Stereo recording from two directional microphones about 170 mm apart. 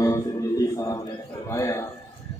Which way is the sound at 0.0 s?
20° left (ahead or behind).